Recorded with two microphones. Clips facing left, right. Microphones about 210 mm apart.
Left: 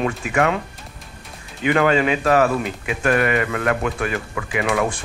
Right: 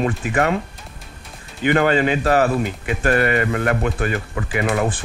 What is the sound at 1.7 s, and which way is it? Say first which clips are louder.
Speech: even; 35° right (ahead or behind).